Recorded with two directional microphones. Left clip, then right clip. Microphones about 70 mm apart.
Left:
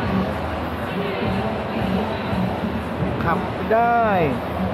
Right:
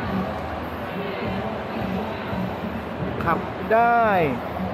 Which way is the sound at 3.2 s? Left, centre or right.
Right.